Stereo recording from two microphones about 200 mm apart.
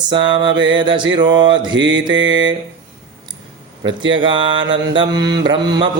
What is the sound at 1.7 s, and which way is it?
Mantra, 65° right (ahead or behind).